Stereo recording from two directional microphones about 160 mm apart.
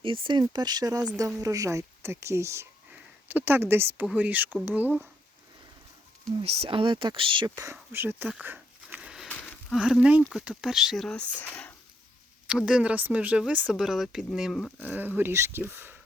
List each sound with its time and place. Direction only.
0.0 s speech: 30° right (ahead or behind); by 5.0 s 10° right (ahead or behind)
6.4 s speech: 40° right (ahead or behind); by 9.3 s 5° right (ahead or behind)
9.4 s a sound: 10° left (ahead or behind)
9.7 s speech: 5° right (ahead or behind)
12.5 s speech: 5° right (ahead or behind)